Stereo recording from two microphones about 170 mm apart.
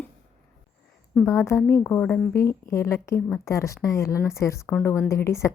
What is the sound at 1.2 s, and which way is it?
Speech, 15° left (ahead or behind).